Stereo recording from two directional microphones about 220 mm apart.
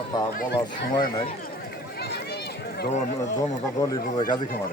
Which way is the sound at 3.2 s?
15° left (ahead or behind).